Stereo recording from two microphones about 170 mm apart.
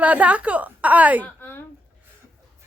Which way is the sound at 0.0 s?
10° right (ahead or behind).